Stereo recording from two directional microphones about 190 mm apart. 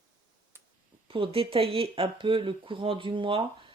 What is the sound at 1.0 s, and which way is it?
Speech, 30° right (ahead or behind).